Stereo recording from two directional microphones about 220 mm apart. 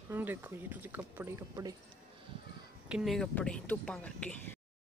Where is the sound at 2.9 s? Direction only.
Centre (ahead or behind).